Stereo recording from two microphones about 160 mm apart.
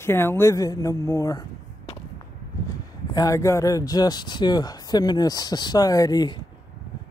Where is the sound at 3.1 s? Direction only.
20° left (ahead or behind).